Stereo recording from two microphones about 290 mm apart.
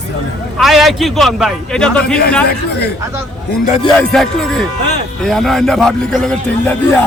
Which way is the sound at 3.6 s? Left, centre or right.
Left.